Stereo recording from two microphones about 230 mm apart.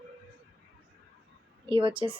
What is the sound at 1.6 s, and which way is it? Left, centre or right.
Speech, right.